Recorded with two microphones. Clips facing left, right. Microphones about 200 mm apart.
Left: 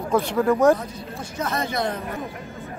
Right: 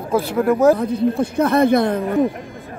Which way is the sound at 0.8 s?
60° right (ahead or behind).